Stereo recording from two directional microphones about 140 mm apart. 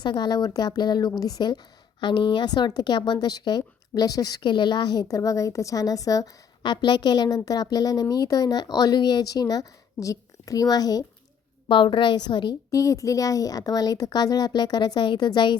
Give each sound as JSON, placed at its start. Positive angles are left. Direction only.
{"t": 0.0, "sound": "a woman's voice", "side_deg": 30}